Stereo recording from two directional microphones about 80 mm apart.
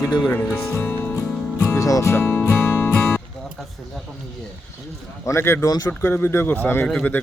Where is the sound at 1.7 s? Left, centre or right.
Left.